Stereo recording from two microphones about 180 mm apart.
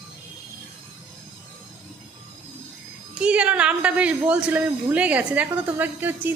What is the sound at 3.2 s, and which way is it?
A woman's voice, 5° right (ahead or behind).